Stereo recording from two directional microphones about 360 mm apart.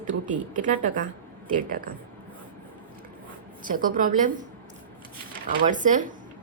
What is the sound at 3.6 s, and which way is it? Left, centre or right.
Speech, right.